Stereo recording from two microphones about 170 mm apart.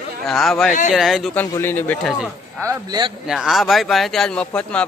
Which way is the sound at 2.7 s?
25° right (ahead or behind).